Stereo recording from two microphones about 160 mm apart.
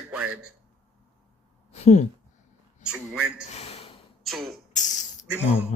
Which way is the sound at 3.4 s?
40° left (ahead or behind).